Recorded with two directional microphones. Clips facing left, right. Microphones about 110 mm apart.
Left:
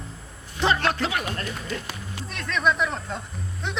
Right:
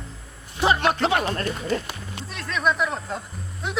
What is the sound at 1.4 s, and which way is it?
Speech, 40° right (ahead or behind).